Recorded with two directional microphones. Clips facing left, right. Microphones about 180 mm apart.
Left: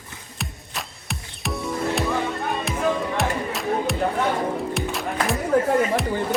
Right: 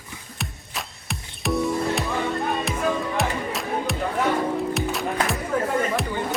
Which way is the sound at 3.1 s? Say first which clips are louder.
Left 1 dB; centre (ahead or behind).